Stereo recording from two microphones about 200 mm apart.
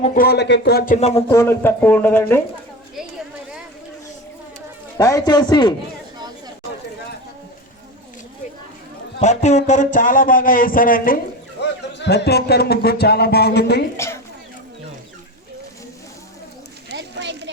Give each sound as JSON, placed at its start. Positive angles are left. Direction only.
{"t": 0.0, "sound": "speech", "side_deg": 45}
{"t": 0.9, "sound": "a man's voice", "side_deg": 30}
{"t": 1.3, "sound": "speech", "side_deg": 15}
{"t": 4.9, "sound": "a man's voice", "side_deg": 20}
{"t": 9.2, "sound": "speech", "side_deg": 35}
{"t": 11.6, "sound": "speech", "side_deg": 55}
{"t": 13.9, "sound": "a woman's voice", "side_deg": 15}
{"t": 16.9, "sound": "a sound", "side_deg": -60}